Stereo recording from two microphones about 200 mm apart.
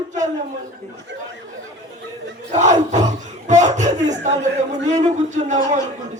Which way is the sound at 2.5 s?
35° right (ahead or behind).